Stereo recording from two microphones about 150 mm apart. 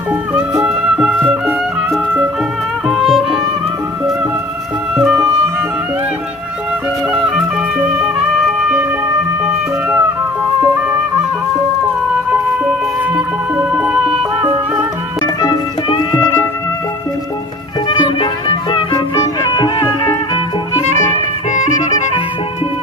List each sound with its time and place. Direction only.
0.1 s music: 10° right (ahead or behind)
4.9 s music: 5° right (ahead or behind)
7.1 s music: 5° right (ahead or behind)
13.1 s music: 5° right (ahead or behind)
15.4 s music: 25° left (ahead or behind)
17.8 s music: 30° left (ahead or behind)